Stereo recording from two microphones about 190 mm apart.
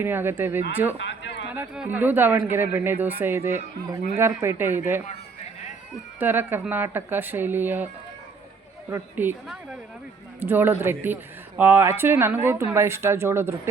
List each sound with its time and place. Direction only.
0.0 s speech: 10° right (ahead or behind)
0.9 s a sound: 70° left (ahead or behind)
1.5 s speech: 5° right (ahead or behind)
6.1 s speech: 10° right (ahead or behind)
8.9 s speech: 10° right (ahead or behind)